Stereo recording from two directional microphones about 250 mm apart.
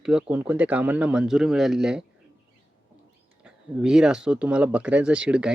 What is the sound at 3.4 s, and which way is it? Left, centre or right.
Speech, centre.